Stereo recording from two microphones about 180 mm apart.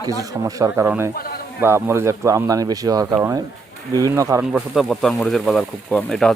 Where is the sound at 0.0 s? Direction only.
20° right (ahead or behind).